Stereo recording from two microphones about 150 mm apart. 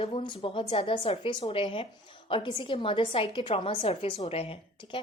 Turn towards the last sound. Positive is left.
turn(degrees=40)  # may be behind; listen again after turning